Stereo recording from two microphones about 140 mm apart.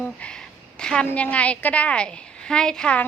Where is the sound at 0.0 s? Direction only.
5° left (ahead or behind).